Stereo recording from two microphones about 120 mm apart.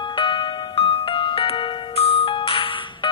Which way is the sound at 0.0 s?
45° left (ahead or behind).